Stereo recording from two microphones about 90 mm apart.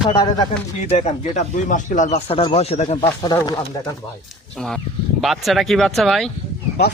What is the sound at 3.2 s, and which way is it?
Speech, 55° left (ahead or behind).